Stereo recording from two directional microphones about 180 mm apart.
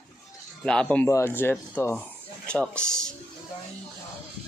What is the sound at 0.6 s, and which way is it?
Speech, 5° left (ahead or behind).